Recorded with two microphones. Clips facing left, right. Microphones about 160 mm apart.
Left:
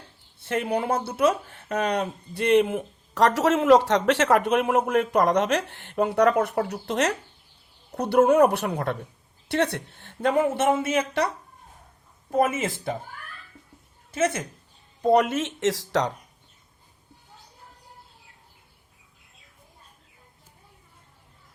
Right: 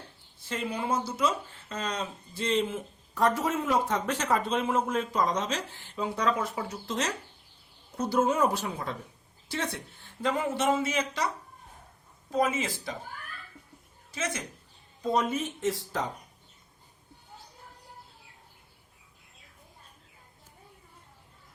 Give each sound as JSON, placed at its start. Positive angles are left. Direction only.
{"t": 0.3, "sound": "speech", "side_deg": 65}
{"t": 12.3, "sound": "speech", "side_deg": 55}
{"t": 14.1, "sound": "speech", "side_deg": 55}
{"t": 15.0, "sound": "speech", "side_deg": 70}